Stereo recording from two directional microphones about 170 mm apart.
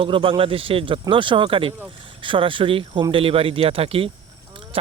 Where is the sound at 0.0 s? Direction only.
30° right (ahead or behind).